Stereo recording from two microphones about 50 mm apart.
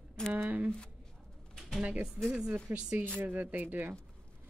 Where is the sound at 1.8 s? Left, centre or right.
Right.